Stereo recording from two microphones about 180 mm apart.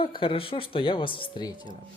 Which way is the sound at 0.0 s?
30° left (ahead or behind).